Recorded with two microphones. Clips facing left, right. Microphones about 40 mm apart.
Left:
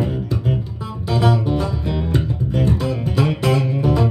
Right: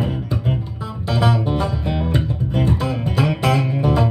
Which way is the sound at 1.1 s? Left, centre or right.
Centre.